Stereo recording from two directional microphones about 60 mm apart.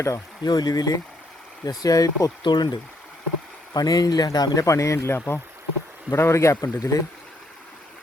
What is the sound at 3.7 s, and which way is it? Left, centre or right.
A man's voice, left.